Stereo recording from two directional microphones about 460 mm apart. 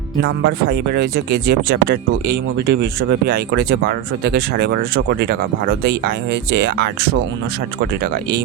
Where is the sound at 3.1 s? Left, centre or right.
Right.